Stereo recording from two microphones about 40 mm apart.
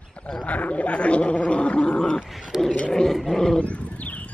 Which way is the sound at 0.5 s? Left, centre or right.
Left.